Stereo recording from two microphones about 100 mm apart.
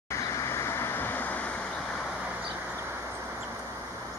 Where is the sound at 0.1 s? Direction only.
30° left (ahead or behind); by 2.0 s 10° left (ahead or behind).